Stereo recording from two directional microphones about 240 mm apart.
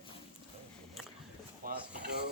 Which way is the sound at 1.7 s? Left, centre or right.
Right.